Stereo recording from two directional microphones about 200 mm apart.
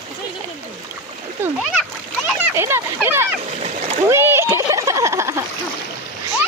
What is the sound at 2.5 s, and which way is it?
Speech, 10° right (ahead or behind).